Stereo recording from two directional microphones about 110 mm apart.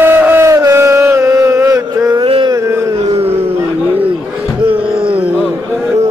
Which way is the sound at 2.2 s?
55° right (ahead or behind).